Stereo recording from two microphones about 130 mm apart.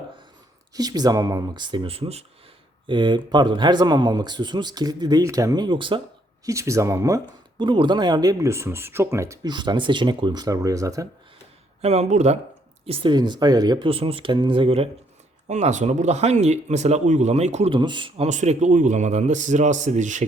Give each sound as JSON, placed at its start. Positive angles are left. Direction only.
{"t": 0.7, "sound": "speech", "side_deg": -30}
{"t": 2.8, "sound": "speech", "side_deg": -35}
{"t": 6.4, "sound": "speech", "side_deg": -25}
{"t": 7.6, "sound": "speech", "side_deg": -35}
{"t": 9.5, "sound": "speech", "side_deg": -35}
{"t": 11.8, "sound": "speech", "side_deg": -55}
{"t": 12.8, "sound": "speech", "side_deg": -50}
{"t": 13.1, "sound": "speech", "side_deg": -35}
{"t": 15.4, "sound": "speech", "side_deg": -60}
{"t": 17.7, "sound": "speech", "side_deg": -35}
{"t": 18.2, "sound": "a man's voice", "side_deg": -65}